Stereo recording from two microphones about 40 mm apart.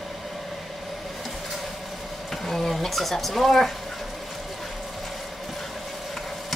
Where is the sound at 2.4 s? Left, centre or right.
Centre.